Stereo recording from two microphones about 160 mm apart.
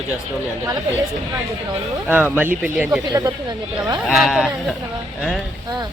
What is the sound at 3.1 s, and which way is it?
Speech, 25° right (ahead or behind).